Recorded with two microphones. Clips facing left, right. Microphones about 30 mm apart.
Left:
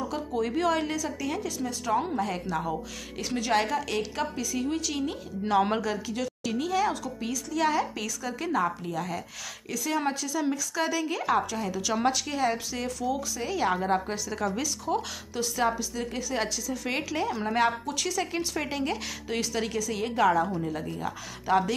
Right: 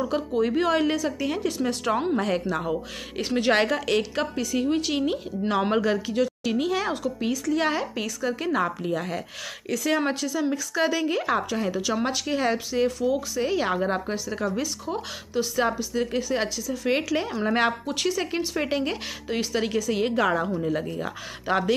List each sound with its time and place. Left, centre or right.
0.4 s a woman's voice: right
2.5 s speech: right
5.4 s a woman's voice: centre
5.8 s a woman's voice: right
13.7 s a woman's voice: centre
16.9 s a woman's voice: centre
17.6 s a woman's voice: right
20.2 s a woman's voice: right